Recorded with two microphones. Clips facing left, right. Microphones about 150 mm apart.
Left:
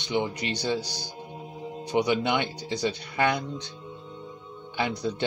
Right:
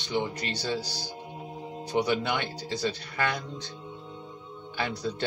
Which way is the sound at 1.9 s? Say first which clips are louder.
Left 3 dB; 20° left (ahead or behind).